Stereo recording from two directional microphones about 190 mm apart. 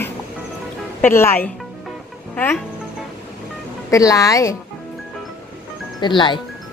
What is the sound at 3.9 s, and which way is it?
Speech, 15° left (ahead or behind).